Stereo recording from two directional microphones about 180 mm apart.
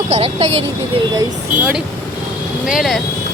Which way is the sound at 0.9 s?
20° right (ahead or behind).